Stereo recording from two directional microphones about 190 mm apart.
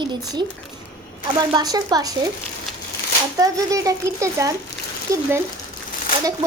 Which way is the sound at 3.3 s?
20° right (ahead or behind).